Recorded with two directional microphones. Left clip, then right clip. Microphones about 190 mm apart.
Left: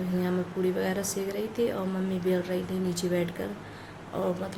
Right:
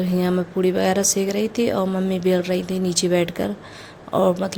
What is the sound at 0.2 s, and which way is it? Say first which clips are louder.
Speech: right 8 dB; 50° right (ahead or behind).